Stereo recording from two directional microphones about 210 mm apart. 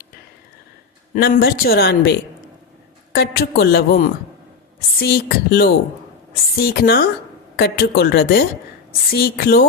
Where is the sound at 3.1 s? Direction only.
50° left (ahead or behind).